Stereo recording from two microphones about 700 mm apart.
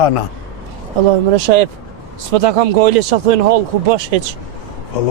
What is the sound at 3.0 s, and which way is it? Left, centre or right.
Speech, right.